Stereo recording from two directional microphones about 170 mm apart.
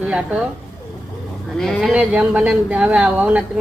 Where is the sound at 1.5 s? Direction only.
Centre (ahead or behind).